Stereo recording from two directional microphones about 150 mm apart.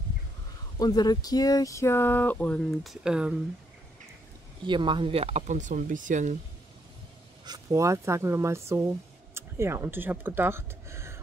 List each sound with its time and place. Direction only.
0.7 s speech: 25° left (ahead or behind); by 3.3 s 5° right (ahead or behind)
4.6 s speech: 30° right (ahead or behind); by 6.3 s 55° right (ahead or behind)
7.4 s speech: 25° right (ahead or behind)